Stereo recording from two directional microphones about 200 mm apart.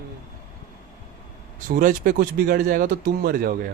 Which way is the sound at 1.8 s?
45° right (ahead or behind).